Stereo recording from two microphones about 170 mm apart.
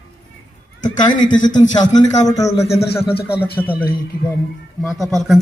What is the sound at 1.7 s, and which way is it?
Speech, 25° left (ahead or behind).